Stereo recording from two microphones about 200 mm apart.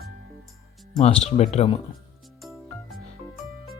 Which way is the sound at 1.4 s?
30° left (ahead or behind).